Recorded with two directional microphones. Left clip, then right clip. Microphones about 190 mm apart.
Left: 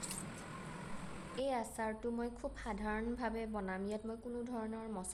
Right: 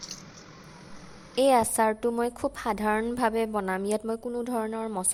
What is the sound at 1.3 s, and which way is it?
A woman's voice, 50° right (ahead or behind).